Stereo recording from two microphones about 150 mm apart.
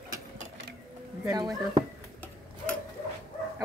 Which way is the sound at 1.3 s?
30° right (ahead or behind).